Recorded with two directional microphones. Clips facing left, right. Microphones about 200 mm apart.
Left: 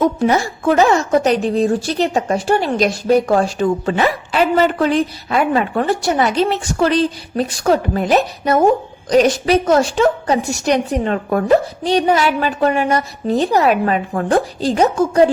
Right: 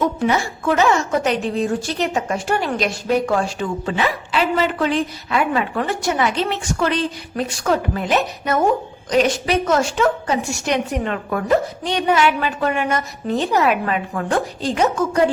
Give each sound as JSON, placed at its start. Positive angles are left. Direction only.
{"t": 0.2, "sound": "a woman's voice", "side_deg": 40}